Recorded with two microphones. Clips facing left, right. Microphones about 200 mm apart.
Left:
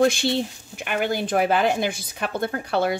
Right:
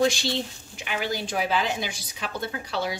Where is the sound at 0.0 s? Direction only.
55° left (ahead or behind).